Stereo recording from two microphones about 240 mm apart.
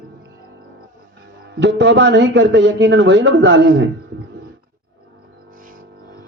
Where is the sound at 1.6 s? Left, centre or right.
Right.